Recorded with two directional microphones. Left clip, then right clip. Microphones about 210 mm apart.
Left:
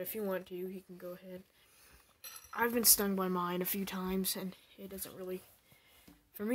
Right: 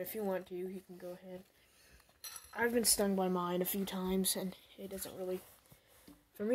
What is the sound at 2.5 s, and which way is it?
Speech, 10° left (ahead or behind).